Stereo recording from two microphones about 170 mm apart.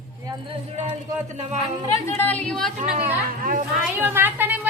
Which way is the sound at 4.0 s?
10° right (ahead or behind).